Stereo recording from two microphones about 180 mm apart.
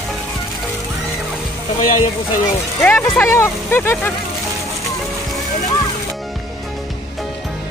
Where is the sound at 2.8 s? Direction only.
10° left (ahead or behind).